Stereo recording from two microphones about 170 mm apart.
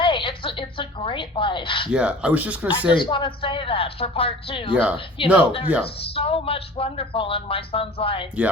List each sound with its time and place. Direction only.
0.0 s a sound: 30° left (ahead or behind)
1.9 s speech: 5° right (ahead or behind)
2.9 s speech: 30° left (ahead or behind)
4.7 s speech: 5° right (ahead or behind)
4.9 s speech: 30° left (ahead or behind)